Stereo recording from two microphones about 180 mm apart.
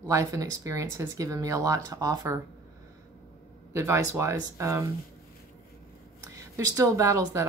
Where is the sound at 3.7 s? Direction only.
15° right (ahead or behind).